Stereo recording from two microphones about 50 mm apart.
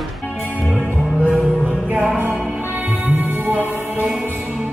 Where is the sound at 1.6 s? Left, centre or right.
Right.